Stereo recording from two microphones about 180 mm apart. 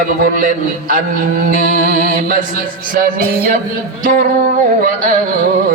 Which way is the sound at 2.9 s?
50° right (ahead or behind).